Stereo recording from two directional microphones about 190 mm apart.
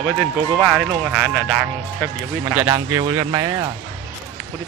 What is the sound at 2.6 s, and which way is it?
Speech, 20° right (ahead or behind).